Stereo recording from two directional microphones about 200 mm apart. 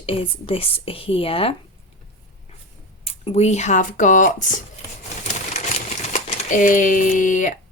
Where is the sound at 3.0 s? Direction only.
30° left (ahead or behind).